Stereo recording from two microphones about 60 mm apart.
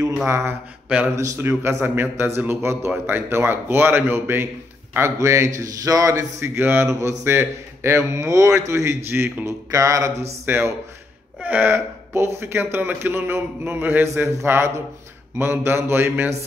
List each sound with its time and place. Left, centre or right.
0.3 s a man's voice: right
1.1 s a man's voice: right
1.4 s a man's voice: right
4.9 s a man's voice: right
6.4 s a man's voice: right
6.9 s a man's voice: right
7.2 s a man's voice: right
9.5 s a man's voice: right
10.4 s a man's voice: right
11.4 s speech: right
11.7 s a man's voice: right